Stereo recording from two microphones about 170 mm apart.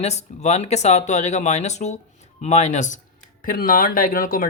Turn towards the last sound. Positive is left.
turn(degrees=55)  # may be behind; listen again after turning